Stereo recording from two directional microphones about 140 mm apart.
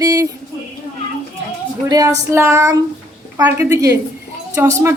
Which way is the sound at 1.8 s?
25° right (ahead or behind).